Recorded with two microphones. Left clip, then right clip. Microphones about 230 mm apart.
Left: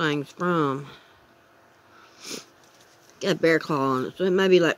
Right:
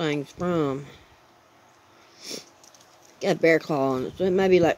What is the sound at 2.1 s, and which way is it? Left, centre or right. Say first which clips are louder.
Sniff: even; centre.